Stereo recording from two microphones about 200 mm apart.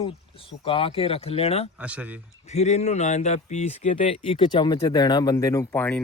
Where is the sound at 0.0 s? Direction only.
25° left (ahead or behind).